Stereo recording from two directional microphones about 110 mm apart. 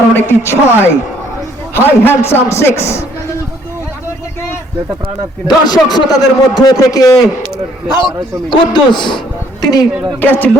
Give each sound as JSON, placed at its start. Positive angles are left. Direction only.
{"t": 0.2, "sound": "a man's voice", "side_deg": 20}
{"t": 5.5, "sound": "a man's voice", "side_deg": 40}
{"t": 7.9, "sound": "a man's voice", "side_deg": 45}
{"t": 10.2, "sound": "speech", "side_deg": 15}